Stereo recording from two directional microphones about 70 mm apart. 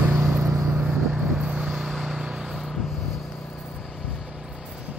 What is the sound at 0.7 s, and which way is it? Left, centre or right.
Vehicle, centre.